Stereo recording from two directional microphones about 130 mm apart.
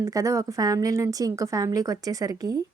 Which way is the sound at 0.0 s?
25° right (ahead or behind).